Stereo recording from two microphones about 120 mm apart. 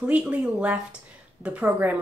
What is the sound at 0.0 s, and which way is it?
A woman's voice, 10° right (ahead or behind).